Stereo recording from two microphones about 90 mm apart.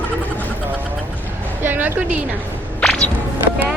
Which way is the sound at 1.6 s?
20° right (ahead or behind).